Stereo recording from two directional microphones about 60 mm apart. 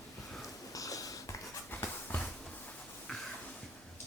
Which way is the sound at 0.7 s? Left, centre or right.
Left.